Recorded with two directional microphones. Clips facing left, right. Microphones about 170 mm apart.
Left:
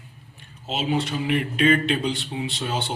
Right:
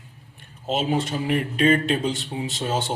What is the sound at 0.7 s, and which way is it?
Speech, 45° right (ahead or behind).